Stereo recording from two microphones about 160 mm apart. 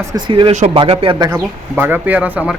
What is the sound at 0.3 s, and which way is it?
Speech, 30° right (ahead or behind).